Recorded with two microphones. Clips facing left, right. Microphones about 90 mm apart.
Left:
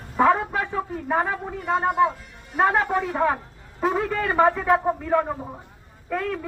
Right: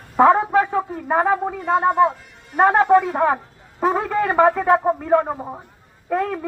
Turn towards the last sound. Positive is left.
turn(degrees=-40)  # may be behind; listen again after turning